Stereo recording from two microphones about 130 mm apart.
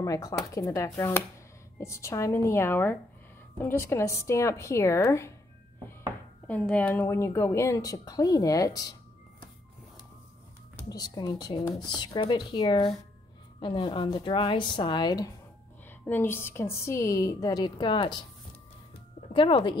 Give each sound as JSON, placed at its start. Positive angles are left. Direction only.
{"t": 0.0, "sound": "a woman's voice", "side_deg": 25}
{"t": 6.4, "sound": "a woman's voice", "side_deg": 10}
{"t": 10.9, "sound": "speech", "side_deg": 30}
{"t": 16.1, "sound": "a woman's voice", "side_deg": 15}
{"t": 19.3, "sound": "speech", "side_deg": 40}